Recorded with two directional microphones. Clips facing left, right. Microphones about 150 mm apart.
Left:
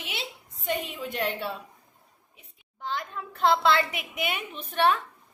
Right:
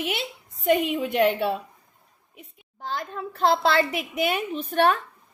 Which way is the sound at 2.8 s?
40° right (ahead or behind).